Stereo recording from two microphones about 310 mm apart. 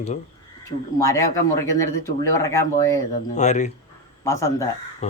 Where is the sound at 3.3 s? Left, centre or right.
Left.